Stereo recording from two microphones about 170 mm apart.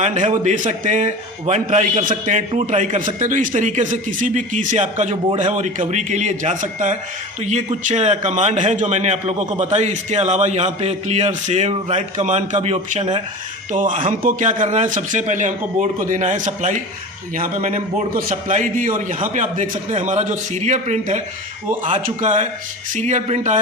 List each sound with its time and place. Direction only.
0.0 s a man's voice: 45° right (ahead or behind)